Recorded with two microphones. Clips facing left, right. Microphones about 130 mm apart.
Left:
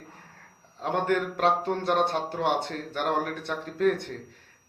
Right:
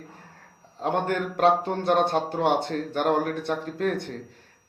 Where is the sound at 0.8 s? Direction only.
35° right (ahead or behind).